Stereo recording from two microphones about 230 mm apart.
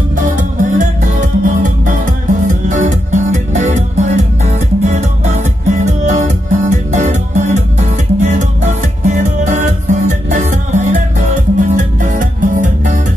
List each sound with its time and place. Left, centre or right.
0.1 s music: right